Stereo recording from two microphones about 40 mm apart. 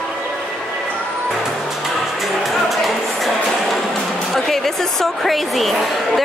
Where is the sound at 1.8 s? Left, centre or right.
Centre.